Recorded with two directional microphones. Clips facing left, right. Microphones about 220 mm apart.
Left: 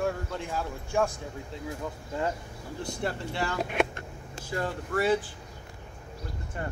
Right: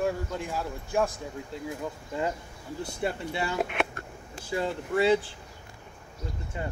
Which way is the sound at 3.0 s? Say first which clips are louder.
Right 1 dB; 15° right (ahead or behind).